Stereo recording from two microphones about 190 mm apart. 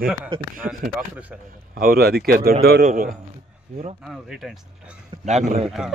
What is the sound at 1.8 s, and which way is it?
Speech, 50° right (ahead or behind).